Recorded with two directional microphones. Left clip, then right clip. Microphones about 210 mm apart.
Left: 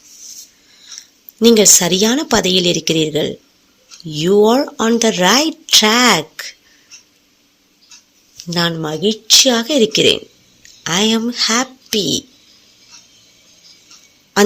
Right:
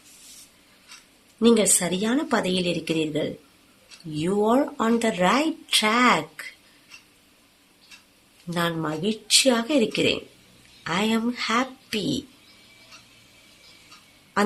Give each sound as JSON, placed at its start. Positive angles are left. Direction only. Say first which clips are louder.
{"t": 1.4, "sound": "speech", "louder": "left 10 dB", "side_deg": 30}
{"t": 8.4, "sound": "speech", "louder": "left 8 dB", "side_deg": 30}